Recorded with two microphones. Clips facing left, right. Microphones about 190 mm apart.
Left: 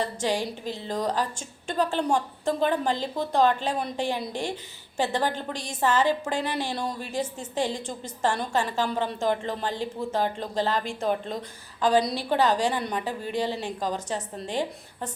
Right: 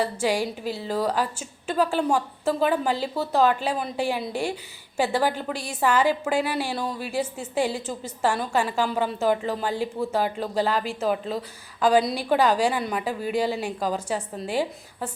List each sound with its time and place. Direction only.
0.0 s a woman's voice: 10° right (ahead or behind)